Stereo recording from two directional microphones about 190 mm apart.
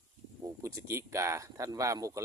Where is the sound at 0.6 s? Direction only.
15° right (ahead or behind).